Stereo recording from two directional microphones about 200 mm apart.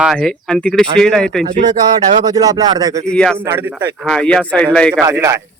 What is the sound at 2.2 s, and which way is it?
Speech, 20° right (ahead or behind).